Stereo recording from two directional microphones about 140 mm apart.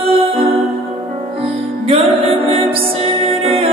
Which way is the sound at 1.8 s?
45° right (ahead or behind).